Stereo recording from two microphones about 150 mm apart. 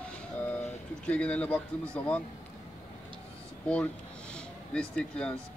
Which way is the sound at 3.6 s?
5° left (ahead or behind).